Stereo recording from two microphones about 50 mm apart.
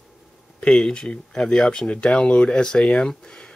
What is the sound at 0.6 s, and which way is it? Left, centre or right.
Speech, centre.